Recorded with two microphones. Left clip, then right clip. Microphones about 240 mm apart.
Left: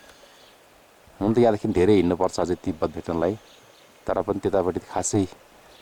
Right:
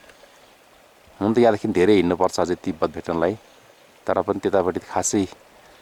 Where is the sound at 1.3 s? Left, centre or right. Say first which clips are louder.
Right 2 dB; centre.